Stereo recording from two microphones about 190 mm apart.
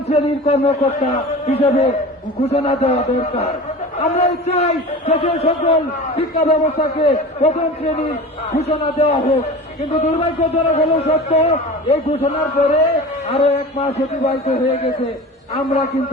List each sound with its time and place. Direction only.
0.1 s a man's voice: 35° left (ahead or behind)